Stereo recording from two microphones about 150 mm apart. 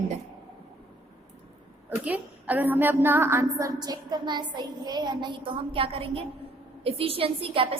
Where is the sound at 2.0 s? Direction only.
10° right (ahead or behind); by 6.2 s 40° right (ahead or behind).